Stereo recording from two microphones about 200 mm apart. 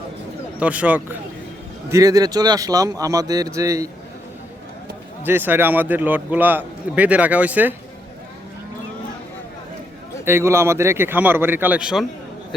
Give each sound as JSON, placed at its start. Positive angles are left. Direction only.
{"t": 0.6, "sound": "speech", "side_deg": -5}
{"t": 5.2, "sound": "speech", "side_deg": -10}
{"t": 10.2, "sound": "speech", "side_deg": -15}